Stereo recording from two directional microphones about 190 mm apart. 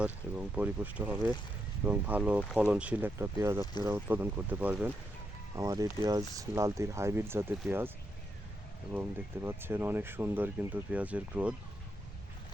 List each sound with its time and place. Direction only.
0.0 s speech: 5° right (ahead or behind)
8.9 s speech: 10° right (ahead or behind)